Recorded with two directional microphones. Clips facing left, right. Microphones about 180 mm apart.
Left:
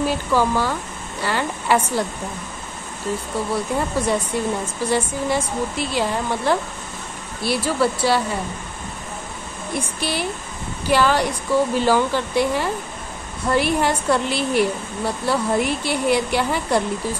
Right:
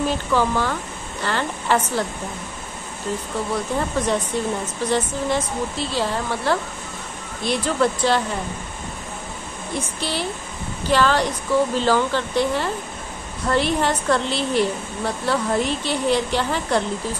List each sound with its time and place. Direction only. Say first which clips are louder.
0.0 s a woman's voice: left 1 dB; 10° left (ahead or behind)
3.5 s a woman's voice: left 1 dB; 10° left (ahead or behind)
9.8 s a woman's voice: left 1 dB; 10° left (ahead or behind)